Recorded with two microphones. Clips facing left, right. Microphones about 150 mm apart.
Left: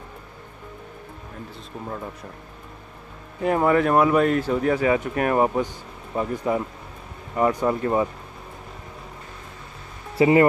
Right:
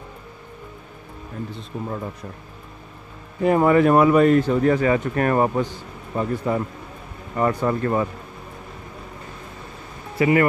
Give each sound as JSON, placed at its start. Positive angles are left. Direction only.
{"t": 1.5, "sound": "speech", "side_deg": -5}
{"t": 3.4, "sound": "speech", "side_deg": 0}
{"t": 10.1, "sound": "speech", "side_deg": 25}